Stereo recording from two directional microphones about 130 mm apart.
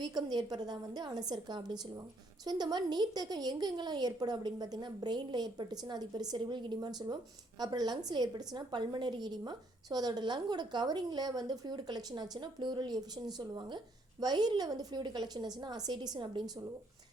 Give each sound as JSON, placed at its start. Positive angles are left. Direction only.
{"t": 0.0, "sound": "a woman's voice", "side_deg": -35}